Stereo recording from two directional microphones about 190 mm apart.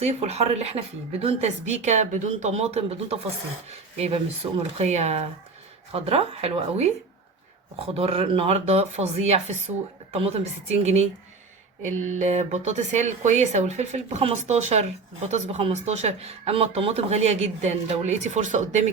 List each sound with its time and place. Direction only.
0.0 s speech: 35° right (ahead or behind)
7.9 s speech: 30° right (ahead or behind)